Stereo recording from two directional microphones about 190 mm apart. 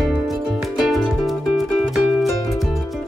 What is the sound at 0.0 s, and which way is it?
Music, centre (ahead or behind).